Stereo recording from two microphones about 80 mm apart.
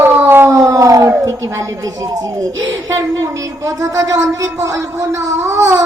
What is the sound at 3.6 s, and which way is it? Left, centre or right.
Speech, right.